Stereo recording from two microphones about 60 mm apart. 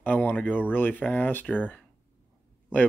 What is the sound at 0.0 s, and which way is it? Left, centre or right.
Speech, left.